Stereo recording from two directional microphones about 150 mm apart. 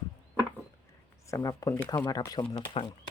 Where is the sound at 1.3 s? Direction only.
20° left (ahead or behind).